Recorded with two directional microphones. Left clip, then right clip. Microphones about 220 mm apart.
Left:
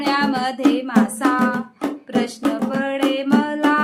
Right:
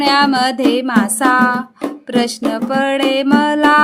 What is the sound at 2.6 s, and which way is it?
Music, 50° right (ahead or behind).